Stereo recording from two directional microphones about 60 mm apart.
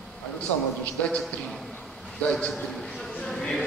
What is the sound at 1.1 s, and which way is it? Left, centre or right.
Speech, centre.